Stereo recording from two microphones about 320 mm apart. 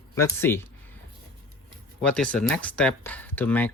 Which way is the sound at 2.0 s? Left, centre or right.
Centre.